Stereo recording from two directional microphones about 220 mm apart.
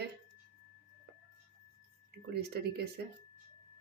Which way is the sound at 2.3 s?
50° right (ahead or behind).